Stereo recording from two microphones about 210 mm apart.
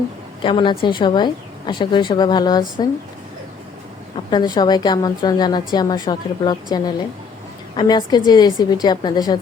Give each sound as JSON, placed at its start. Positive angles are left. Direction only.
{"t": 0.4, "sound": "a woman's voice", "side_deg": 25}
{"t": 4.3, "sound": "a woman's voice", "side_deg": 20}